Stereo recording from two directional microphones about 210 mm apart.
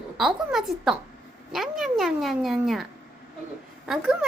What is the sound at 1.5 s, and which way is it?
Cat, centre (ahead or behind).